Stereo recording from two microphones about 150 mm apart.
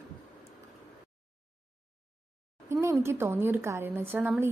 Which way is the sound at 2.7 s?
20° right (ahead or behind).